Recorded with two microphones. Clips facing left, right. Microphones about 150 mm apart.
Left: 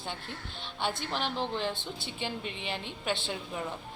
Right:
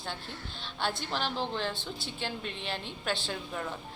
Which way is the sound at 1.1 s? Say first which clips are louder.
Even; 15° left (ahead or behind).